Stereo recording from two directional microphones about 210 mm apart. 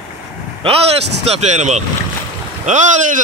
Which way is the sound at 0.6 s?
25° right (ahead or behind).